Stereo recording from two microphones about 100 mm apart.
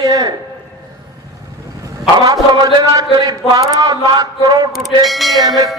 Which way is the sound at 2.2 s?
40° right (ahead or behind).